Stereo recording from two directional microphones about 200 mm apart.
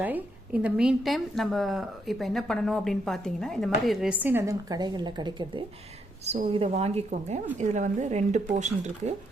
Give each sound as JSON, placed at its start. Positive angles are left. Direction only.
{"t": 0.0, "sound": "a woman's voice", "side_deg": -10}